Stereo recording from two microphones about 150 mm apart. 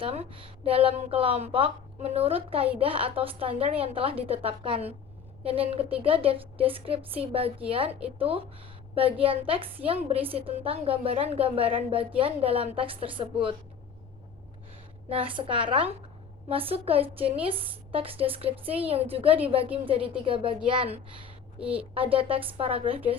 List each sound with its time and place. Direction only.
0.0 s a woman's voice: 40° right (ahead or behind)
15.1 s a woman's voice: 35° right (ahead or behind)
21.6 s a woman's voice: 10° right (ahead or behind)
21.9 s a woman's voice: 40° right (ahead or behind)